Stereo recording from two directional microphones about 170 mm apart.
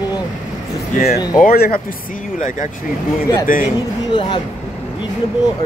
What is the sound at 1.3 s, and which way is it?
Speech, 60° left (ahead or behind).